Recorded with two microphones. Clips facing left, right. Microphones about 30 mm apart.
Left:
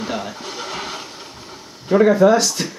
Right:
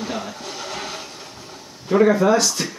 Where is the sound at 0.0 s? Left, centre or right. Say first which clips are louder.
Left 2 dB; centre.